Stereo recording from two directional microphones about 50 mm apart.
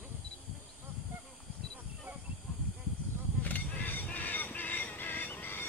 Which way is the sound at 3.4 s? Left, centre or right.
Left.